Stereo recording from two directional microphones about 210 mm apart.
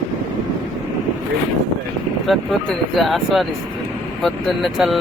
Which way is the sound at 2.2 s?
Centre (ahead or behind).